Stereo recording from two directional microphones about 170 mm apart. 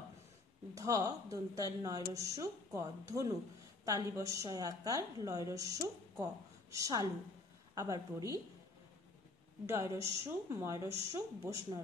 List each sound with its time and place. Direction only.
0.7 s a woman's voice: 20° right (ahead or behind)
9.7 s a woman's voice: 15° right (ahead or behind)